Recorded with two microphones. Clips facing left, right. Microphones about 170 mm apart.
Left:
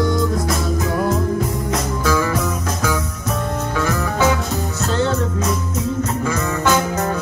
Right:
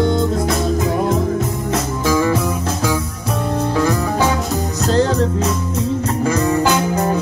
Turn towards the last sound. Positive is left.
turn(degrees=-30)  # may be behind; listen again after turning